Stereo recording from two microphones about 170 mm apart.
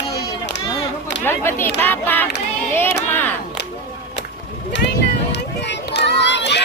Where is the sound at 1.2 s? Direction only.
15° left (ahead or behind).